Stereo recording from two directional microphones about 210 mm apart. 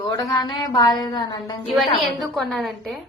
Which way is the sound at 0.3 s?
20° left (ahead or behind).